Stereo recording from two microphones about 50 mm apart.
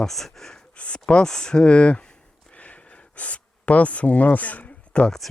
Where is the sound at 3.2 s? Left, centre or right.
Left.